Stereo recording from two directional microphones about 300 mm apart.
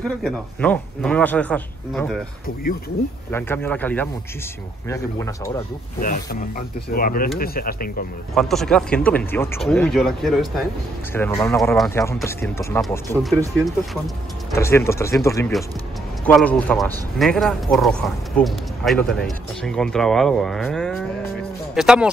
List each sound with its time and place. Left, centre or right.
0.2 s speech: centre
3.3 s speech: centre
5.9 s speech: left
8.4 s speech: centre
14.5 s speech: centre